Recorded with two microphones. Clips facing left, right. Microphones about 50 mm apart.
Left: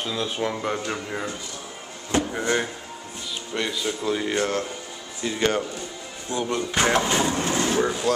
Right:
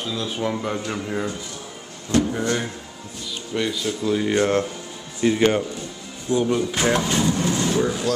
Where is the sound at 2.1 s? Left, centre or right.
Left.